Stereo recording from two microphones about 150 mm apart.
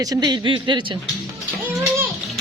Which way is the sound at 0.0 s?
25° right (ahead or behind).